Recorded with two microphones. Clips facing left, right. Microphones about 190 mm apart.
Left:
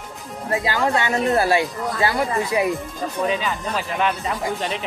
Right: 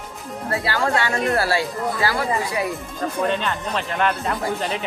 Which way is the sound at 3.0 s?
5° left (ahead or behind).